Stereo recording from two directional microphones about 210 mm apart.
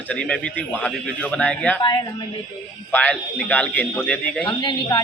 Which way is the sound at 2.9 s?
5° left (ahead or behind).